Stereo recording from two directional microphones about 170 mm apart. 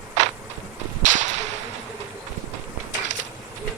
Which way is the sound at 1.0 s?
45° right (ahead or behind).